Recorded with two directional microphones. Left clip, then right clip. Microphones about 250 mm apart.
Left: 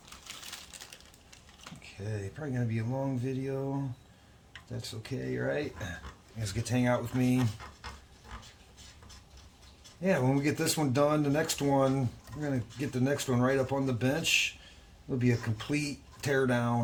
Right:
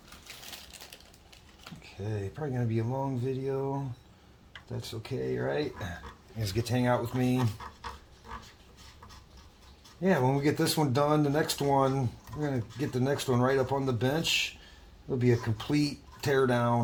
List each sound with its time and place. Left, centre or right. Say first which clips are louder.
1.8 s speech: right 3 dB; centre
4.8 s speech: right 4 dB; centre
10.0 s speech: right 2 dB; centre
15.2 s speech: right 4 dB; centre